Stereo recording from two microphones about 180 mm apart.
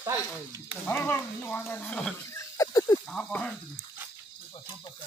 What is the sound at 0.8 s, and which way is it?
Speech, 10° left (ahead or behind).